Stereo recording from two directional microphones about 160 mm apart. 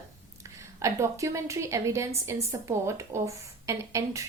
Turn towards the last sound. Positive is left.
turn(degrees=-20)  # may be behind; listen again after turning